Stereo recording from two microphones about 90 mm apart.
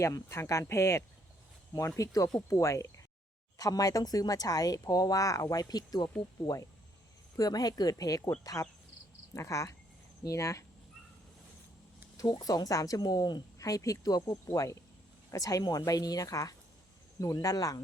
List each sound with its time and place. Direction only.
0.0 s speech: 30° left (ahead or behind)
9.3 s speech: 35° left (ahead or behind)
12.4 s speech: 45° left (ahead or behind)
13.6 s speech: 40° left (ahead or behind)